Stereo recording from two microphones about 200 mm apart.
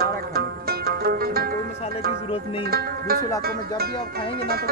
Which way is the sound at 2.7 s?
50° right (ahead or behind).